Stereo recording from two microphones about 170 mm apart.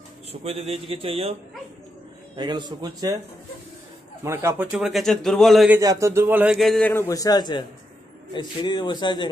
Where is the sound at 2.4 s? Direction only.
25° right (ahead or behind).